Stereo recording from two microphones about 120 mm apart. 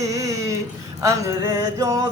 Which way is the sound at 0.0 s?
25° right (ahead or behind).